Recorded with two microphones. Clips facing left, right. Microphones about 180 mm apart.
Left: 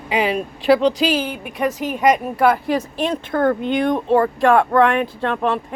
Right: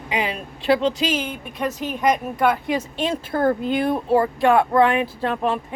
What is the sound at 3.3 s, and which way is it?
Speech, 30° right (ahead or behind).